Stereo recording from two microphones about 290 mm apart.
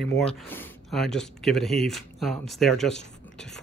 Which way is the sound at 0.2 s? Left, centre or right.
Centre.